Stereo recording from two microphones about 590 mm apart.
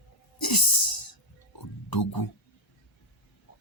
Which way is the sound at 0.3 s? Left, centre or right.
Left.